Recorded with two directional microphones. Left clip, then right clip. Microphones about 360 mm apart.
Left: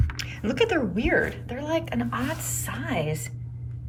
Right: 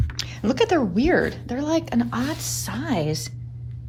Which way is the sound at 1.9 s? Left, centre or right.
Right.